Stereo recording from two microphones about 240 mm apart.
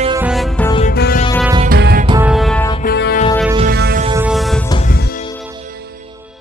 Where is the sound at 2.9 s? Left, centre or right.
Left.